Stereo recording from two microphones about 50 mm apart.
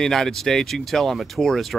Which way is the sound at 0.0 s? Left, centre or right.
Centre.